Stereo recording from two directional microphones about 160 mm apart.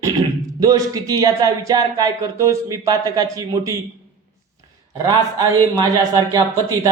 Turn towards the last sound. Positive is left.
turn(degrees=-25)  # may be behind; listen again after turning